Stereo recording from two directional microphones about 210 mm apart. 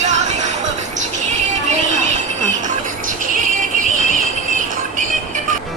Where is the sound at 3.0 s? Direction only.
40° right (ahead or behind).